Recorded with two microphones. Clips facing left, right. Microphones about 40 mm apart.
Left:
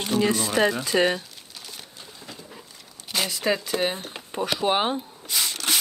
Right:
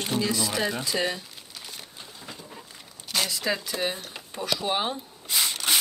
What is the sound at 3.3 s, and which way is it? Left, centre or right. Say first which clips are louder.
Speech: left 4 dB; left.